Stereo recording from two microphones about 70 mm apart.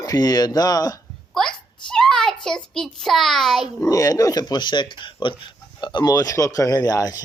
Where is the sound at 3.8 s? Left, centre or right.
Left.